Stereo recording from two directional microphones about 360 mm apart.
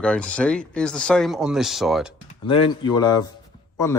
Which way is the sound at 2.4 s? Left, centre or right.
Centre.